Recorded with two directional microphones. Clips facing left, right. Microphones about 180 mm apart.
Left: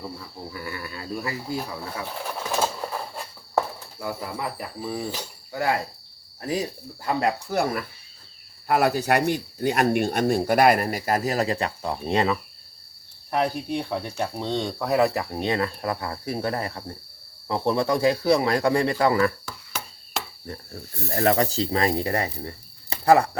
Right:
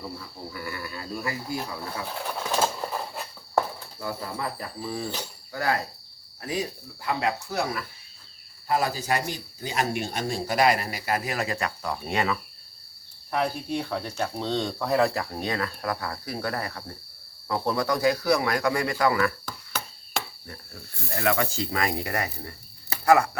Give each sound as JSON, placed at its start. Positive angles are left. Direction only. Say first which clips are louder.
{"t": 0.6, "sound": "a sound", "louder": "even", "side_deg": 20}
{"t": 1.5, "sound": "speech", "louder": "left 1 dB", "side_deg": 10}
{"t": 2.0, "sound": "bird", "louder": "right 1 dB", "side_deg": 0}
{"t": 4.0, "sound": "speech", "louder": "left 1 dB", "side_deg": 10}
{"t": 5.5, "sound": "cricket", "louder": "left 2 dB", "side_deg": 20}
{"t": 6.4, "sound": "speech", "louder": "left 3 dB", "side_deg": 35}
{"t": 8.6, "sound": "speech", "louder": "left 5 dB", "side_deg": 65}
{"t": 13.7, "sound": "speech", "louder": "left 2 dB", "side_deg": 15}
{"t": 15.0, "sound": "speech", "louder": "left 3 dB", "side_deg": 20}
{"t": 19.5, "sound": "a sound", "louder": "right 1 dB", "side_deg": 10}
{"t": 21.2, "sound": "speech", "louder": "left 4 dB", "side_deg": 35}